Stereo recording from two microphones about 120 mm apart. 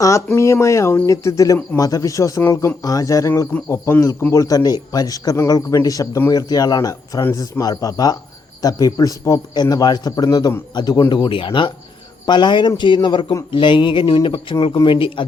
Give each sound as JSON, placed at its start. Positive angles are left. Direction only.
{"t": 0.3, "sound": "a man's voice", "side_deg": 25}
{"t": 7.2, "sound": "speech", "side_deg": 20}
{"t": 7.6, "sound": "a man's voice", "side_deg": 30}
{"t": 13.5, "sound": "a sound", "side_deg": 45}